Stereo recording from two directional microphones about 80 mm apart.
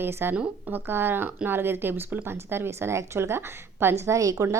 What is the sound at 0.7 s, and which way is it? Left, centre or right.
Speech, right.